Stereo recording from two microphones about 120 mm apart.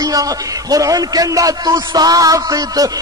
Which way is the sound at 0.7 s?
30° right (ahead or behind).